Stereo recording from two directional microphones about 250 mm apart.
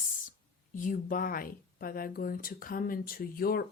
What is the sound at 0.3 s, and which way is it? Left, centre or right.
A woman's voice, left.